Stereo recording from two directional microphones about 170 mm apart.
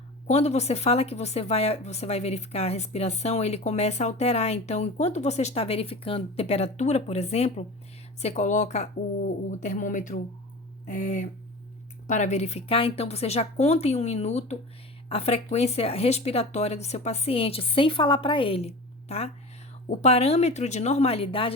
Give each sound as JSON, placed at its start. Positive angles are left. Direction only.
{"t": 0.3, "sound": "speech", "side_deg": 40}